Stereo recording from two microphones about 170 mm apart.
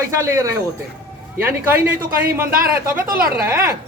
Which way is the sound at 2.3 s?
15° right (ahead or behind).